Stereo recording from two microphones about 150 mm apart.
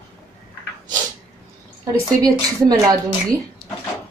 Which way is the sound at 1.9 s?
25° right (ahead or behind).